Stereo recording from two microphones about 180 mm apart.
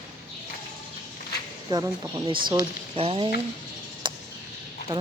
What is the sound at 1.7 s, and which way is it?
Speech, 25° right (ahead or behind).